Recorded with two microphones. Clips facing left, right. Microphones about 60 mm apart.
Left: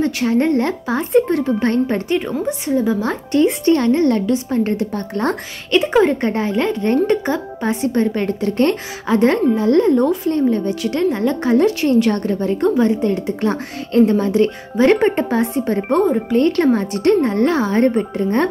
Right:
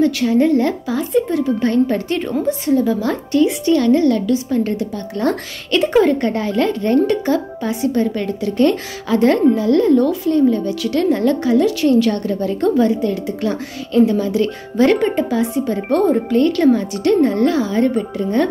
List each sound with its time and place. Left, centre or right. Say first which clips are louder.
0.0 s a woman's voice: right 2 dB; left
1.1 s speech: left 3 dB; left
1.4 s a woman's voice: right 1 dB; left
2.0 s a woman's voice: even; centre; by 5.4 s left
5.7 s a woman's voice: even; centre; by 18.5 s left